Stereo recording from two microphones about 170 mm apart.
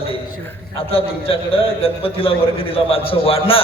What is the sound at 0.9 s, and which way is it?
A man's voice, 35° left (ahead or behind).